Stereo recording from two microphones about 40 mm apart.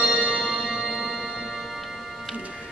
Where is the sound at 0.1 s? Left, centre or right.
Centre.